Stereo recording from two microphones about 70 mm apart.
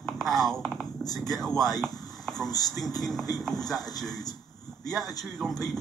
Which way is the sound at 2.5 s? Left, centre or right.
Left.